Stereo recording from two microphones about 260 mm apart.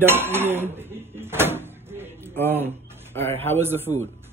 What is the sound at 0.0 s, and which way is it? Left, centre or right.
Dishes, centre.